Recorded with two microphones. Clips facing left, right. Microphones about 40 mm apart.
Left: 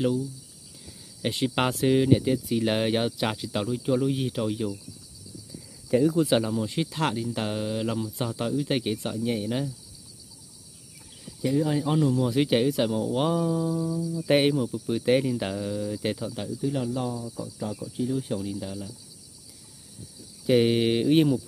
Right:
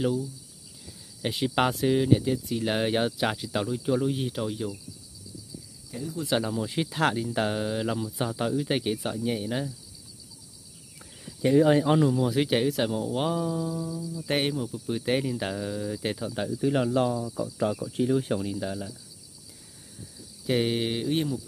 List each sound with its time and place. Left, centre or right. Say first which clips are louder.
1.2 s speech: even; centre
5.9 s speech: left 15 dB; left
6.2 s speech: left 3 dB; centre
11.5 s speech: right 6 dB; right
12.1 s speech: left 1 dB; centre
16.6 s speech: right 4 dB; right
18.4 s speech: right 2 dB; centre
20.4 s speech: left 5 dB; centre; by 21.4 s left